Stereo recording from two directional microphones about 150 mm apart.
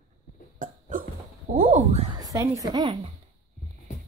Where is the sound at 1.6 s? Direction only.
45° right (ahead or behind).